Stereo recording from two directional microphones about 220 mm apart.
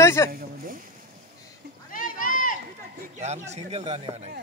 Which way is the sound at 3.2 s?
30° right (ahead or behind).